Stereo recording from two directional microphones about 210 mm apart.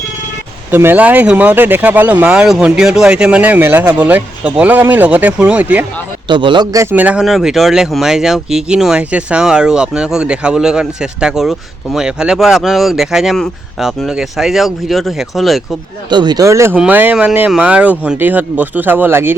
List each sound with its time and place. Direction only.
0.7 s speech: 10° right (ahead or behind)
6.2 s a man's voice: 20° right (ahead or behind)
6.9 s speech: 5° right (ahead or behind)
16.0 s speech: 20° right (ahead or behind)